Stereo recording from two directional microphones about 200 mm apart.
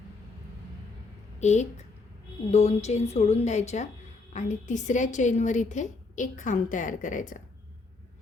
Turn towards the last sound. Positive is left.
turn(degrees=40)  # may be behind; listen again after turning